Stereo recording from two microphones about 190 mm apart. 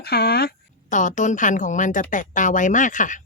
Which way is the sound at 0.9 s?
40° left (ahead or behind).